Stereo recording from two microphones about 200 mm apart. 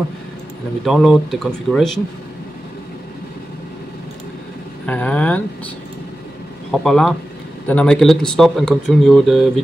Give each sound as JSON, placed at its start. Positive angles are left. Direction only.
{"t": 0.8, "sound": "speech", "side_deg": 0}
{"t": 4.8, "sound": "speech", "side_deg": 5}
{"t": 6.7, "sound": "speech", "side_deg": 0}